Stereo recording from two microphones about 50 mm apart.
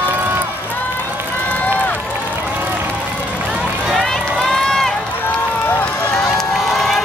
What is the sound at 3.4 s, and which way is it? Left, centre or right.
Run, centre.